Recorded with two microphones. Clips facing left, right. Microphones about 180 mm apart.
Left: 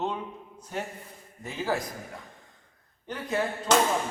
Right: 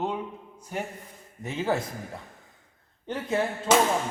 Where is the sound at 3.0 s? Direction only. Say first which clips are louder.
Right 2 dB; 25° right (ahead or behind).